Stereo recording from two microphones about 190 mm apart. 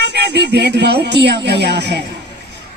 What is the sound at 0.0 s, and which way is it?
Speech, 60° right (ahead or behind).